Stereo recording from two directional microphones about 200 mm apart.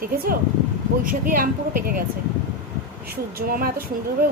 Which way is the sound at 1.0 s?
45° right (ahead or behind).